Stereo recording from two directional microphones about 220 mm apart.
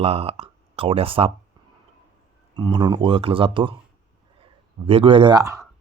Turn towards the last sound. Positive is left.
turn(degrees=-15)  # may be behind; listen again after turning